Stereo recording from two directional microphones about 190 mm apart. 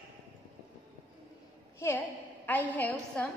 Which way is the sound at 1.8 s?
10° left (ahead or behind).